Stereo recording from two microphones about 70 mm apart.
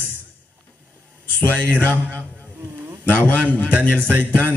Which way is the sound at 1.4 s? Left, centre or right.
Left.